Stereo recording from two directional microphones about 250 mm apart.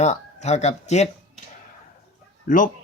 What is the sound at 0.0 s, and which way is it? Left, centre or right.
Speech, left.